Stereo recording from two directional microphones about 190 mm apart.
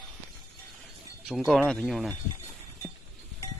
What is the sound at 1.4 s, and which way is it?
Speech, centre (ahead or behind).